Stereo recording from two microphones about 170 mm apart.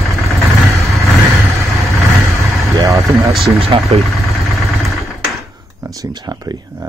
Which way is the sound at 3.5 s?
35° right (ahead or behind).